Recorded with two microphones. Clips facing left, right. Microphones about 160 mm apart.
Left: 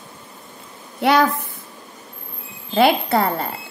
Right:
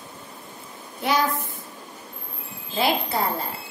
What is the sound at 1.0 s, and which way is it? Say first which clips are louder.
Speech: left 7 dB; 65° left (ahead or behind).